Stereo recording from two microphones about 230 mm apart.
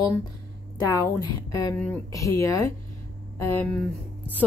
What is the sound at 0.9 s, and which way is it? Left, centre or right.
Speech, centre.